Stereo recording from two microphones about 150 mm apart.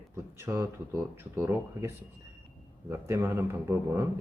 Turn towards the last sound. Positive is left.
turn(degrees=-15)  # may be behind; listen again after turning